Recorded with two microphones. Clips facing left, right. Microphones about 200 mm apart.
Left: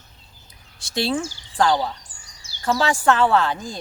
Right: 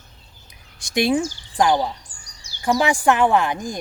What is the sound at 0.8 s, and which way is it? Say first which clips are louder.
A woman's voice: right 4 dB; 15° right (ahead or behind).